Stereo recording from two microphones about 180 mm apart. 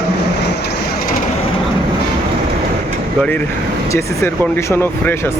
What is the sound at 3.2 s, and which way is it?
Speech, 10° left (ahead or behind).